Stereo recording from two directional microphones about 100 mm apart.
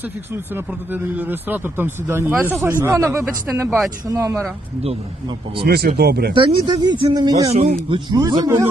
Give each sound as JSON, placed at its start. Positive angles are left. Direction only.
{"t": 0.9, "sound": "a man's voice", "side_deg": -20}
{"t": 5.5, "sound": "speech", "side_deg": -60}
{"t": 6.7, "sound": "a man's voice", "side_deg": -45}
{"t": 7.5, "sound": "speech", "side_deg": -75}
{"t": 8.1, "sound": "a man's voice", "side_deg": -45}
{"t": 8.4, "sound": "a man's voice", "side_deg": -30}